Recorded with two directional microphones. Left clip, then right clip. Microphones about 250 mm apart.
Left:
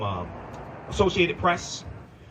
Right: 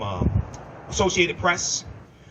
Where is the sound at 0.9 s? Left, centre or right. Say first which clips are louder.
Right 1 dB; right.